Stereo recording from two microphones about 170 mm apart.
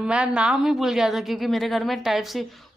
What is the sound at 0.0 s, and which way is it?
A woman's voice, 5° right (ahead or behind).